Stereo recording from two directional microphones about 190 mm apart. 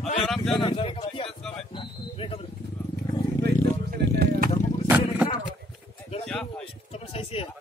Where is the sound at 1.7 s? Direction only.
30° left (ahead or behind).